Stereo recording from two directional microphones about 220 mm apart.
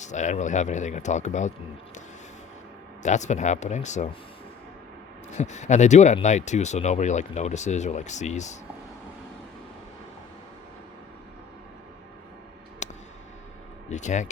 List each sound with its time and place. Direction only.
0.0 s speech: 35° left (ahead or behind)
3.0 s speech: 30° left (ahead or behind)
5.4 s speech: 30° left (ahead or behind)
12.8 s a sound: 30° left (ahead or behind)
13.9 s speech: 35° left (ahead or behind)